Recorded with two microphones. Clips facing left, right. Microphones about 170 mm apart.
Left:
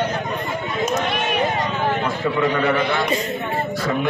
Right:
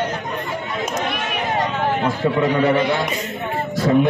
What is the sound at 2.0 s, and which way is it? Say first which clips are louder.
Speech: right 2 dB; 35° right (ahead or behind).